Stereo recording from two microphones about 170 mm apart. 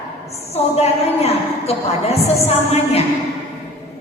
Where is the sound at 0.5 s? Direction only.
40° left (ahead or behind).